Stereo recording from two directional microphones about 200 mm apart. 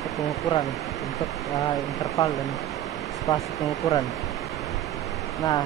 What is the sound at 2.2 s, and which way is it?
Speech, 15° left (ahead or behind).